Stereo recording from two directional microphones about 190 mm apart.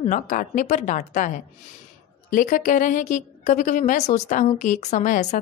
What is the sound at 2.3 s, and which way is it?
A woman's voice, 45° left (ahead or behind).